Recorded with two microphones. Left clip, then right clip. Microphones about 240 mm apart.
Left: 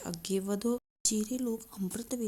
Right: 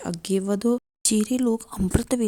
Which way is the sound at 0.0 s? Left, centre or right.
Right.